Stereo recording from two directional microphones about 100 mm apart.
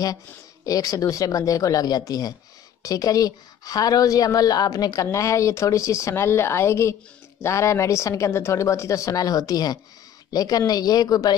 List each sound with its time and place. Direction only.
0.7 s speech: 35° left (ahead or behind)